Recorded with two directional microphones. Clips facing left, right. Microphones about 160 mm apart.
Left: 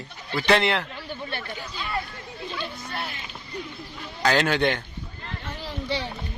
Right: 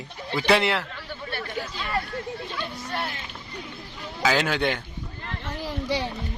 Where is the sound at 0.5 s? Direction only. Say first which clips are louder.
Even; 5° right (ahead or behind).